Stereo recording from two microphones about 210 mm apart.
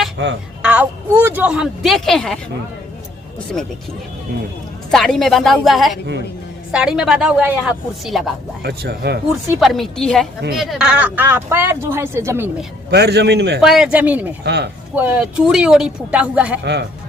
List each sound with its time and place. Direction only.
0.6 s a woman's voice: 5° right (ahead or behind)
4.9 s a woman's voice: centre (ahead or behind)
8.6 s a man's voice: 50° right (ahead or behind)
9.3 s a woman's voice: centre (ahead or behind)
12.9 s a man's voice: 50° right (ahead or behind)
13.6 s a woman's voice: centre (ahead or behind)
14.4 s a man's voice: 55° right (ahead or behind)
14.9 s a woman's voice: 10° right (ahead or behind)